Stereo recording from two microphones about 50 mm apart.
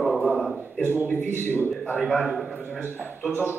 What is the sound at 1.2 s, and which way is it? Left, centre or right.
Speech, left.